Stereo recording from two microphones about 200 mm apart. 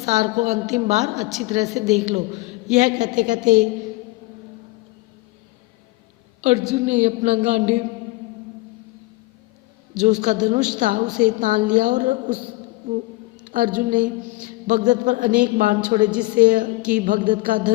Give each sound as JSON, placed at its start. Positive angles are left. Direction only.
{"t": 0.0, "sound": "a woman's voice", "side_deg": -35}
{"t": 6.7, "sound": "a woman's voice", "side_deg": -35}
{"t": 10.0, "sound": "a woman's voice", "side_deg": -40}
{"t": 11.1, "sound": "a woman's voice", "side_deg": -5}
{"t": 11.3, "sound": "a woman's voice", "side_deg": -40}
{"t": 13.5, "sound": "a woman's voice", "side_deg": -45}
{"t": 16.0, "sound": "a woman's voice", "side_deg": -5}
{"t": 16.4, "sound": "a woman's voice", "side_deg": -40}